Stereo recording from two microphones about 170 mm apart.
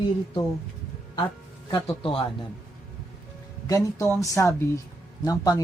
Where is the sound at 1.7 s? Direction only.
30° left (ahead or behind).